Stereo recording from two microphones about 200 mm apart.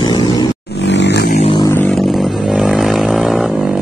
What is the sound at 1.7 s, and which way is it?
Vehicle, 5° left (ahead or behind).